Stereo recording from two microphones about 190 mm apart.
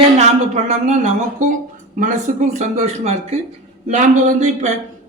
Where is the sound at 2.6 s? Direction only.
35° right (ahead or behind).